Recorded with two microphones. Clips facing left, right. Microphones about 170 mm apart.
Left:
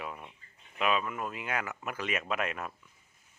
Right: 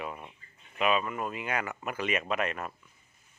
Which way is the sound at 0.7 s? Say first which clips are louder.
Right 2 dB; centre (ahead or behind).